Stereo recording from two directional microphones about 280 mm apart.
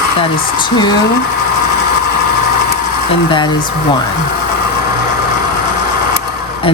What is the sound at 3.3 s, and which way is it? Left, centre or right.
Speech, centre.